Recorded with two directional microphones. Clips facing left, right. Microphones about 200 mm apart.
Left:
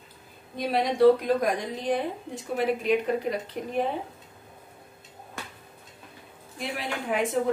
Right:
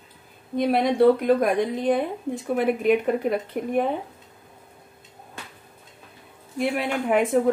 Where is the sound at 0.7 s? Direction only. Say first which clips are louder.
Right 1 dB; 55° right (ahead or behind).